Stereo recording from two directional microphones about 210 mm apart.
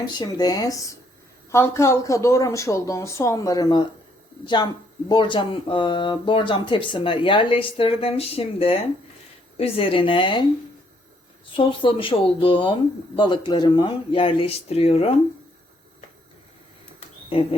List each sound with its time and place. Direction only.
0.0 s speech: 20° left (ahead or behind)
11.5 s speech: 25° left (ahead or behind)
17.3 s speech: 25° left (ahead or behind)